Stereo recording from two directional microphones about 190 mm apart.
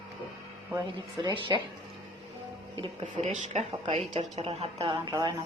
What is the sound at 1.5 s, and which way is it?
Speech, 20° right (ahead or behind).